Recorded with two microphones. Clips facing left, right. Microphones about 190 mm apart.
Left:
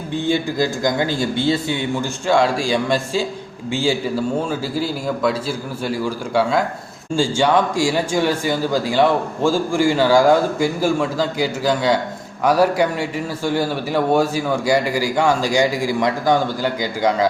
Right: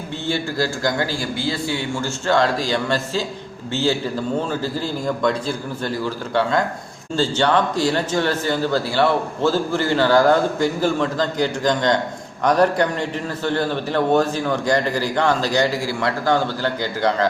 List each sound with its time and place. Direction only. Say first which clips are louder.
0.3 s speech: left 3 dB; 15° left (ahead or behind)